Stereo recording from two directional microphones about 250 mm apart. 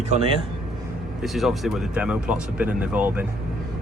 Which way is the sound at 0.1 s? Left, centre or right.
Right.